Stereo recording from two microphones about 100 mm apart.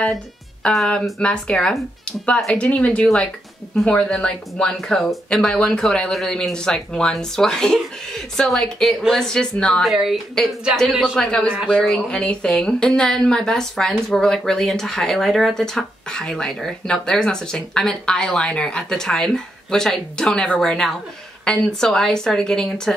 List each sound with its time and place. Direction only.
0.0 s a woman's voice: 10° left (ahead or behind)